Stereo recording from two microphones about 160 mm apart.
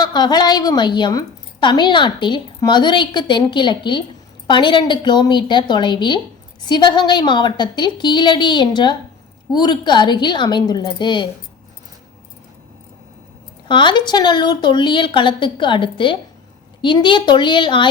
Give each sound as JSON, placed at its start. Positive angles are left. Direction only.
{"t": 0.0, "sound": "a woman's voice", "side_deg": 25}
{"t": 13.7, "sound": "a woman's voice", "side_deg": 30}